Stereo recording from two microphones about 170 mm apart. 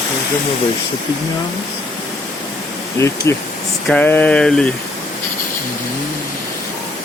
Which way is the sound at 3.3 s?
15° left (ahead or behind).